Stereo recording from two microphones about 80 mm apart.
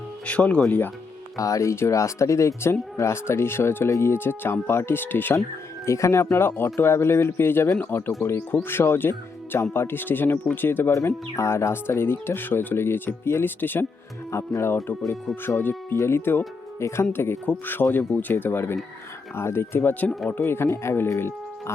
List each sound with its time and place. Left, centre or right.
0.3 s speech: centre
1.4 s speech: left
5.8 s speech: left; by 20.4 s centre
20.4 s speech: left